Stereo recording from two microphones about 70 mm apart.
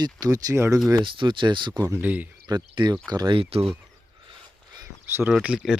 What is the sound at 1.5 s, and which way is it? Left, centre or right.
Speech, right.